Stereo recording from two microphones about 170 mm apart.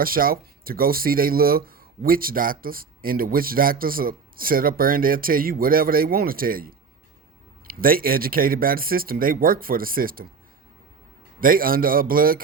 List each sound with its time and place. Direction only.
0.0 s speech: 60° right (ahead or behind)
7.7 s speech: 60° right (ahead or behind)
11.3 s speech: 55° right (ahead or behind)